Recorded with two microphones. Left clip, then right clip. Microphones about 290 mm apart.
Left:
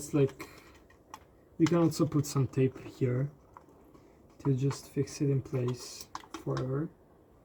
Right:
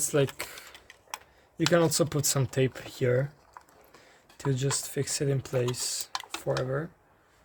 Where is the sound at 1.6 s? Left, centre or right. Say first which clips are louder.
Right 4 dB; right.